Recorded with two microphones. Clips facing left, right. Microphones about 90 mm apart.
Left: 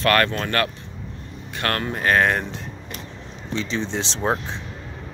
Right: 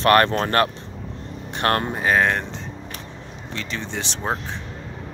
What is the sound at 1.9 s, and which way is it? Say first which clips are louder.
Speech: even; 10° right (ahead or behind).